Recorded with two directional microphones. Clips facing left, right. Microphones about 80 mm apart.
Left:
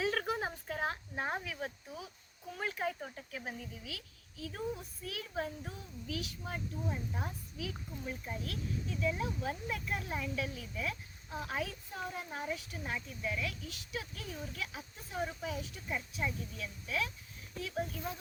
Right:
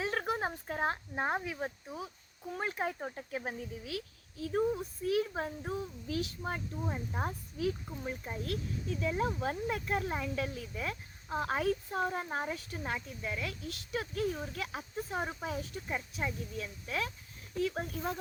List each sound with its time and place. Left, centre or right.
0.0 s speech: right
3.4 s a woman's voice: right
13.7 s a woman's voice: right